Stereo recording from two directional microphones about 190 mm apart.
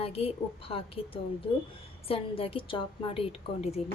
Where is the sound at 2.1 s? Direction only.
30° left (ahead or behind).